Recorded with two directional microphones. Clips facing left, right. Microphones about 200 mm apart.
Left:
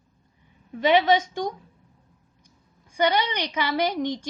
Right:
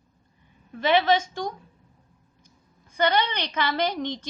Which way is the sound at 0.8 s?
15° left (ahead or behind).